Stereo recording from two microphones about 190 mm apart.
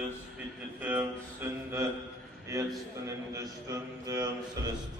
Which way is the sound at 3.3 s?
15° right (ahead or behind).